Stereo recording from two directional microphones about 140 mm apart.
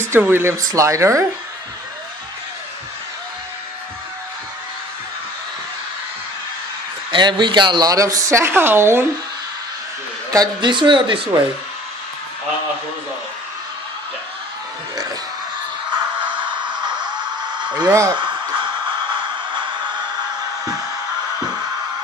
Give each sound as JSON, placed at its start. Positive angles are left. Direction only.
{"t": 0.1, "sound": "a woman's voice", "side_deg": -15}
{"t": 7.1, "sound": "a woman's voice", "side_deg": -35}
{"t": 10.3, "sound": "speech", "side_deg": -30}
{"t": 16.2, "sound": "a sound", "side_deg": -35}